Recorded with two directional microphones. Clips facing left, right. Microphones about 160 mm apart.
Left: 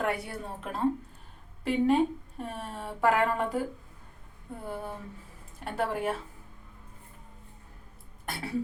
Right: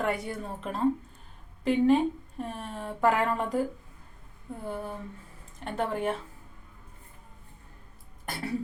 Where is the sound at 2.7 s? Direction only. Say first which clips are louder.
Right 1 dB; centre (ahead or behind).